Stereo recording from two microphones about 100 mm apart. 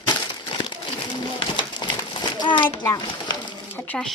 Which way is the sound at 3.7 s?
15° left (ahead or behind).